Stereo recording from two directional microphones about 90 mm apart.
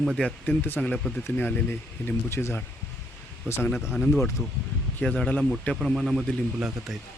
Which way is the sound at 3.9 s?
5° left (ahead or behind).